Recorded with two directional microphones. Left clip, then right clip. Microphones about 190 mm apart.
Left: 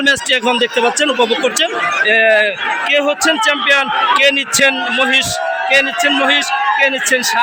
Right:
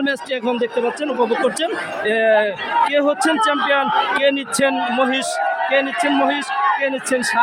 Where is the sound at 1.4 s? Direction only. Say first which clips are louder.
Left 5 dB; 15° right (ahead or behind).